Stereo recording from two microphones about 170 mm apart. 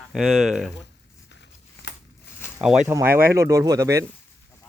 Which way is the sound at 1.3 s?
90° left.